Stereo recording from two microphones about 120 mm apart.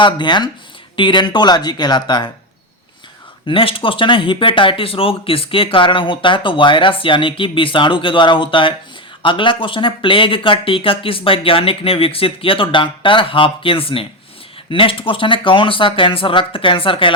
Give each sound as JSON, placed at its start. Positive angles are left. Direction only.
{"t": 0.0, "sound": "speech", "side_deg": 40}
{"t": 3.4, "sound": "speech", "side_deg": 50}